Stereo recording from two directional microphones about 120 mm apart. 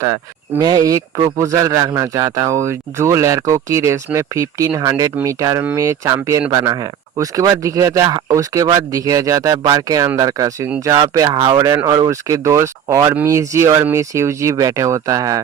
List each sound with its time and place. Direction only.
0.8 s speech: 25° right (ahead or behind)